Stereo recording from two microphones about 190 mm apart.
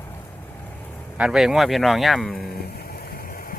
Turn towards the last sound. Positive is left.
turn(degrees=50)  # may be behind; listen again after turning